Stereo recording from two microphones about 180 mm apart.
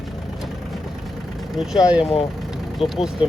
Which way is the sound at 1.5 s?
5° right (ahead or behind).